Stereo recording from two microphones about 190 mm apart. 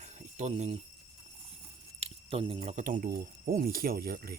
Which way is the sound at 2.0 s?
30° right (ahead or behind).